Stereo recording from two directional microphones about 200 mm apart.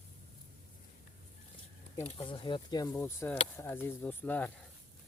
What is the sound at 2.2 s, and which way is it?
Speech, 25° left (ahead or behind).